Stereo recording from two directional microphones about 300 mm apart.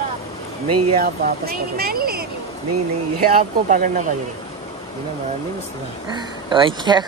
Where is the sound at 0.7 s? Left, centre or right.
Right.